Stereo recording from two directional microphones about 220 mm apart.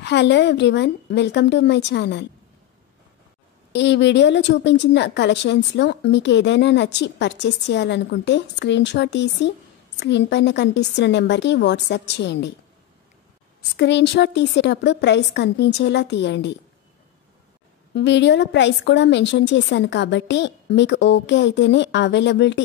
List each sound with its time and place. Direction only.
0.0 s a woman's voice: 50° left (ahead or behind)
3.7 s a woman's voice: 55° left (ahead or behind)
13.6 s a woman's voice: 50° left (ahead or behind)
17.9 s a woman's voice: 55° left (ahead or behind)